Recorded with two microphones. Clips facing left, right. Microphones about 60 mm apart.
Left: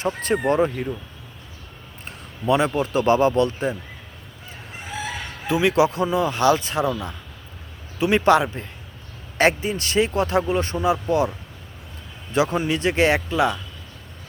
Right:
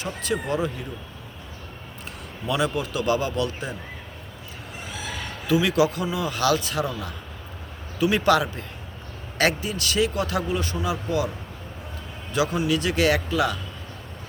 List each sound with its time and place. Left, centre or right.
0.0 s a man's voice: left
2.0 s a man's voice: left
5.5 s a man's voice: left
12.3 s a man's voice: left